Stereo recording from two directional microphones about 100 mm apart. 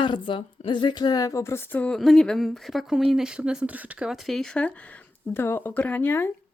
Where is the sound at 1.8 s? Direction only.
5° left (ahead or behind); by 4.1 s 15° right (ahead or behind).